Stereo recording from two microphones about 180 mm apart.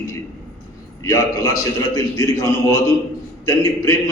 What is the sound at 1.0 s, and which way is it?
A man's voice, 15° left (ahead or behind).